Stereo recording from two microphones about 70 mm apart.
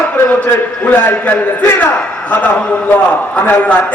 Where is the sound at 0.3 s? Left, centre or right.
Left.